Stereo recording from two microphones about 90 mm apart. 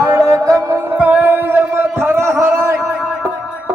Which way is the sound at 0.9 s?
15° right (ahead or behind).